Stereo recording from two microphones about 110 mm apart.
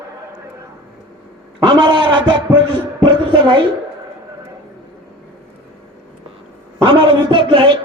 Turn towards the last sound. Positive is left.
turn(degrees=-50)  # may be behind; listen again after turning